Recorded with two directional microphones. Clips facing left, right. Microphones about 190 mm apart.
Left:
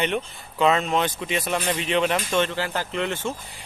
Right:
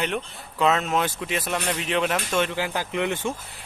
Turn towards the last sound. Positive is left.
turn(degrees=-15)  # may be behind; listen again after turning